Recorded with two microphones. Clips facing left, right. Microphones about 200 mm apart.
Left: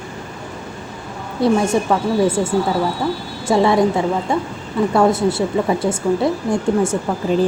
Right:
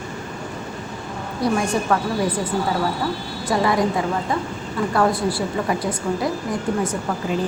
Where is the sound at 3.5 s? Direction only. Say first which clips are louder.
Left 5 dB; 25° left (ahead or behind).